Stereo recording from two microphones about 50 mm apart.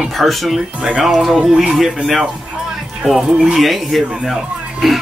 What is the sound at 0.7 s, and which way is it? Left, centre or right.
Speech, right.